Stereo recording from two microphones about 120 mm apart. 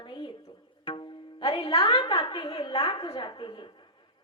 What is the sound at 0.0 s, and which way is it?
Music, 40° left (ahead or behind).